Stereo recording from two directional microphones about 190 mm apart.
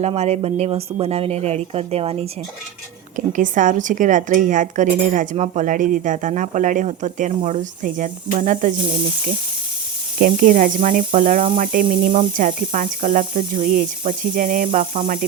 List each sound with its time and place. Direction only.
0.0 s speech: 35° right (ahead or behind)
3.2 s a woman's voice: 45° right (ahead or behind)
10.2 s a woman's voice: 45° right (ahead or behind)